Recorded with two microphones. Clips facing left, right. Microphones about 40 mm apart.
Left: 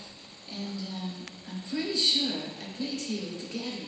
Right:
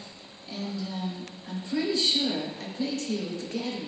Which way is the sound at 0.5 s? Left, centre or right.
Right.